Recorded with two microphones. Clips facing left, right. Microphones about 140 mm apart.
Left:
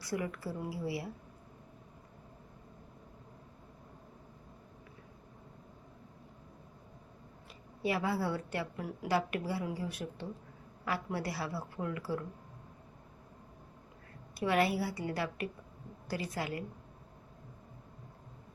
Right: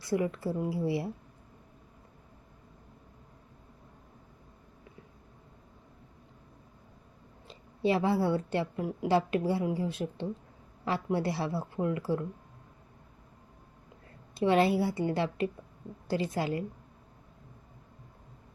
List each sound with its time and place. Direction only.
0.0 s a woman's voice: 25° right (ahead or behind)
7.4 s a woman's voice: 25° right (ahead or behind)
14.3 s a woman's voice: 25° right (ahead or behind)